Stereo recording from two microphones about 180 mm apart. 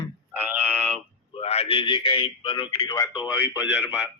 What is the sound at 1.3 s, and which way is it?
A man's voice, 35° left (ahead or behind).